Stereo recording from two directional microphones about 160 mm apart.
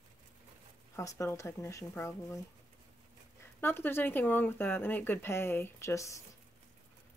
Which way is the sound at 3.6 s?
15° left (ahead or behind).